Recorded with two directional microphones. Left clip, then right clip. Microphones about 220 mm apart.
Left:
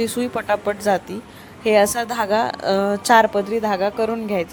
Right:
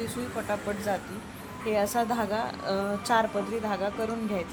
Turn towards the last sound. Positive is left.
turn(degrees=30)  # may be behind; listen again after turning